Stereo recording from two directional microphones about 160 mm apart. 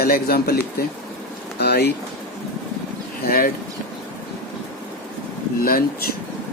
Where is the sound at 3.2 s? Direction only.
65° left (ahead or behind).